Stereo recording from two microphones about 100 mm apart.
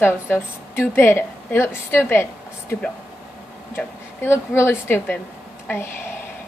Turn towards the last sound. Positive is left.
turn(degrees=25)  # may be behind; listen again after turning